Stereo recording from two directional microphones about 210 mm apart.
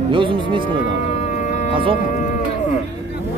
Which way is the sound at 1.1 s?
35° left (ahead or behind).